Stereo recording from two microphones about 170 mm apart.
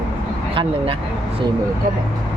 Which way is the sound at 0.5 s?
30° right (ahead or behind).